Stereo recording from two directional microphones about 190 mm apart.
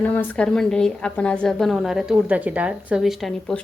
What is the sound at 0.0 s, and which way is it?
A woman's voice, 10° left (ahead or behind).